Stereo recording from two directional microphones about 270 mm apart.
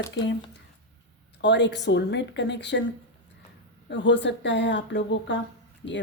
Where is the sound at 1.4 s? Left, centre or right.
Left.